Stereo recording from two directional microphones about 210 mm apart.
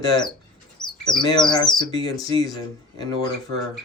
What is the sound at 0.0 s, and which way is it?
Speech, 20° left (ahead or behind).